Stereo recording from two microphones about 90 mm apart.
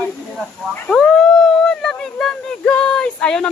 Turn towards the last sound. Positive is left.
turn(degrees=10)  # may be behind; listen again after turning